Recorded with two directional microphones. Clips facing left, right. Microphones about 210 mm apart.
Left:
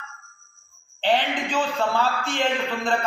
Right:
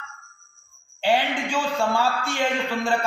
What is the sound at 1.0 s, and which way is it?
A man's voice, 10° right (ahead or behind).